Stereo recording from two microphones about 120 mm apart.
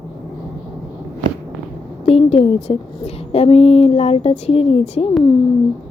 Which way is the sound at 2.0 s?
55° left (ahead or behind).